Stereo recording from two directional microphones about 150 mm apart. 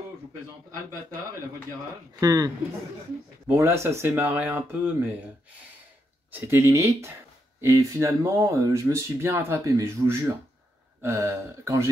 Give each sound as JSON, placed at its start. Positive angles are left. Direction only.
{"t": 2.1, "sound": "speech", "side_deg": -25}
{"t": 6.3, "sound": "speech", "side_deg": -15}